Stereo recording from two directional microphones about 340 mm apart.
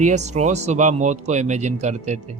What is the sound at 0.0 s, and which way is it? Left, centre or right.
Speech, right.